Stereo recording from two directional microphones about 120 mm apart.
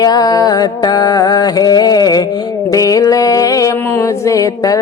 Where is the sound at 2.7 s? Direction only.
30° left (ahead or behind).